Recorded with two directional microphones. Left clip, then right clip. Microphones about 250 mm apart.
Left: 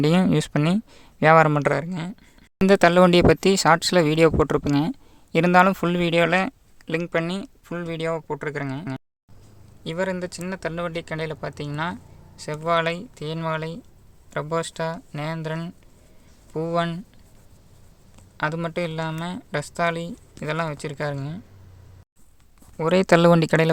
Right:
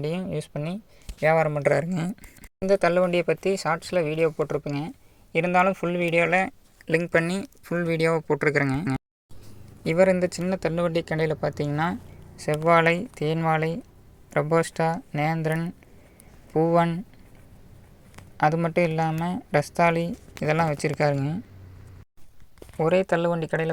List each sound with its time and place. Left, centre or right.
0.3 s speech: left
1.6 s speech: centre
1.9 s speech: centre
2.6 s speech: left; by 7.4 s centre
7.4 s speech: centre
9.8 s speech: centre
18.3 s speech: centre
23.4 s speech: left